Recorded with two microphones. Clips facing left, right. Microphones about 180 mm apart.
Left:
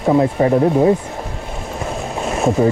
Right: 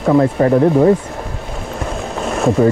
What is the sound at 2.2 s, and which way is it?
Boat, centre (ahead or behind).